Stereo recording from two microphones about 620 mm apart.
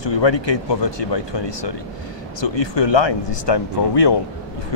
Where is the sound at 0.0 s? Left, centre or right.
Left.